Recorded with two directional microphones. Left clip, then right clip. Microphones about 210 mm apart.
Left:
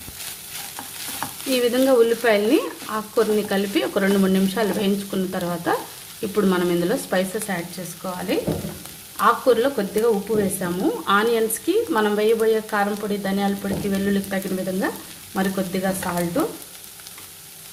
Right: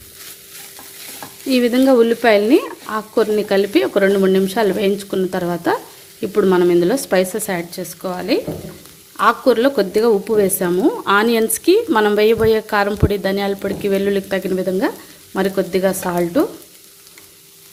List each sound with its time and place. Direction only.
1.5 s speech: 35° right (ahead or behind)
9.1 s speech: 45° right (ahead or behind)